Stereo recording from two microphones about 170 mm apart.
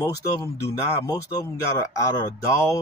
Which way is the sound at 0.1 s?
20° left (ahead or behind).